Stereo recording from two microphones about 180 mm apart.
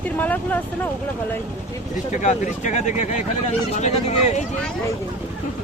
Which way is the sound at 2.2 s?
40° left (ahead or behind).